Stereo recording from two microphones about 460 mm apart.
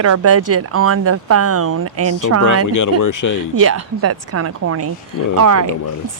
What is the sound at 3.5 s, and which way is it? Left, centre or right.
Speech, right.